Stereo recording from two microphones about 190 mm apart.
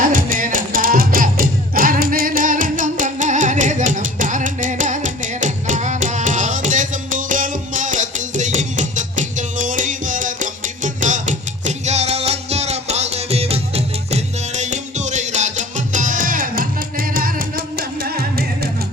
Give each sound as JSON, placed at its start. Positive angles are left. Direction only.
{"t": 0.0, "sound": "music", "side_deg": -45}